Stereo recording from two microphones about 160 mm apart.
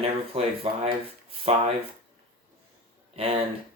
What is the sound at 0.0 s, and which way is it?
Speech, 40° right (ahead or behind).